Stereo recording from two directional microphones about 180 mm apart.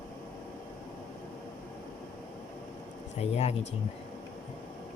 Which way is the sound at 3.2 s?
35° left (ahead or behind).